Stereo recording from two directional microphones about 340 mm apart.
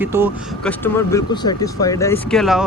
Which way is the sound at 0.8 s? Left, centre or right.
Centre.